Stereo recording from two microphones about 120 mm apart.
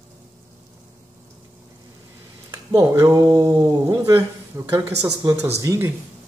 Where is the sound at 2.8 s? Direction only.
30° right (ahead or behind).